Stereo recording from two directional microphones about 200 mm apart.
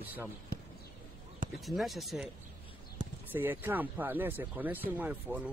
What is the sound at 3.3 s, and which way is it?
Speech, 10° right (ahead or behind).